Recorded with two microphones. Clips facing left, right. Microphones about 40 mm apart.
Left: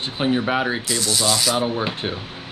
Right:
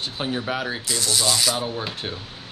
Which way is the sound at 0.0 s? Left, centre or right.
Left.